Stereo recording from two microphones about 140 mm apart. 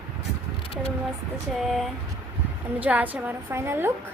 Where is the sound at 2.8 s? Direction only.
10° right (ahead or behind).